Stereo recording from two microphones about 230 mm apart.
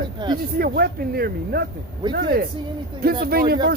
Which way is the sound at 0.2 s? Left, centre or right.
Centre.